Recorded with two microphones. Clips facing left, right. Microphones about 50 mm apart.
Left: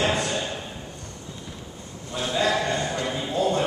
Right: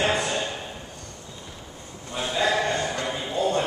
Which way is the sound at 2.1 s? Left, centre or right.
Centre.